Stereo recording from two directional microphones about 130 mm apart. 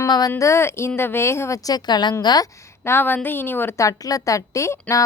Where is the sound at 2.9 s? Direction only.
15° left (ahead or behind).